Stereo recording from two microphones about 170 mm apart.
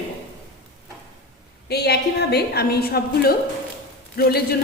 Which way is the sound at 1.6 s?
75° left (ahead or behind).